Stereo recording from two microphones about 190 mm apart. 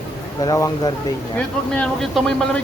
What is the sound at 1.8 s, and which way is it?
Speech, 5° left (ahead or behind).